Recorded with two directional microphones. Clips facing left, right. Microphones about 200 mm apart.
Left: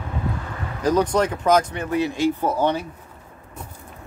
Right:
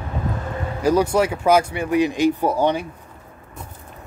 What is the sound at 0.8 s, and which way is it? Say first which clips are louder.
Speech: right 2 dB; 10° right (ahead or behind).